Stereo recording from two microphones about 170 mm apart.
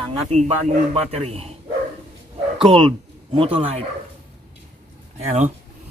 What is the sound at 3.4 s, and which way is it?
Speech, 35° right (ahead or behind).